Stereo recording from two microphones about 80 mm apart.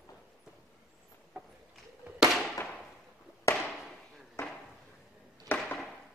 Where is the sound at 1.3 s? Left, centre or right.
Centre.